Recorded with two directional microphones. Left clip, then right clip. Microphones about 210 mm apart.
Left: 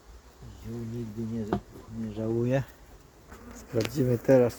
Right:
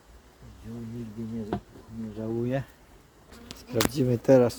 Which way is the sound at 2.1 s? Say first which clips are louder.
Left 2 dB; 35° left (ahead or behind).